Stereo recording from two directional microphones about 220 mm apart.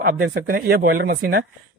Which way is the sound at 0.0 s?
45° right (ahead or behind).